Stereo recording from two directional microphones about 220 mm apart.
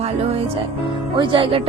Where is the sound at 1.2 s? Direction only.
25° right (ahead or behind).